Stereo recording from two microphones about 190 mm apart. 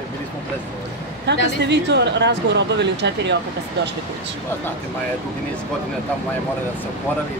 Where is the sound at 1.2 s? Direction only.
65° right (ahead or behind).